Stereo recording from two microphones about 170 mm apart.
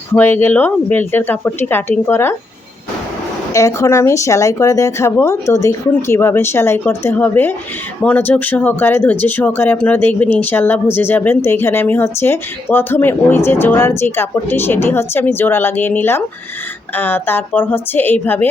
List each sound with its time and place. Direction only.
0.1 s speech: 10° left (ahead or behind)
3.5 s speech: 20° left (ahead or behind)